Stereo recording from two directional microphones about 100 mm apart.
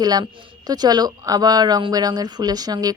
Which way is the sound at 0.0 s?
40° right (ahead or behind).